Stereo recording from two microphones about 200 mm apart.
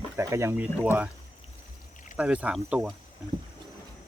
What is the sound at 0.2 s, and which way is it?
Speech, 15° right (ahead or behind).